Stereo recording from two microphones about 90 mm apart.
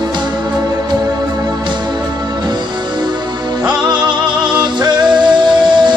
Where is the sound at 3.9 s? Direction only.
55° right (ahead or behind).